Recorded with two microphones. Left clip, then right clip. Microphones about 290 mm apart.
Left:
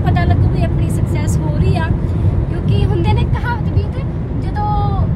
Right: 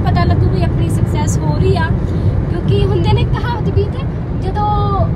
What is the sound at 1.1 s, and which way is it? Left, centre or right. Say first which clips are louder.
Vehicle: right 3 dB; right.